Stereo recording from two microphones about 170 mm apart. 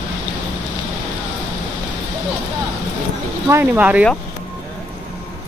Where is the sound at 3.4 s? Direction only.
10° right (ahead or behind).